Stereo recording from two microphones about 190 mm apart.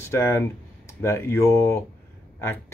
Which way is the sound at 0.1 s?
15° left (ahead or behind).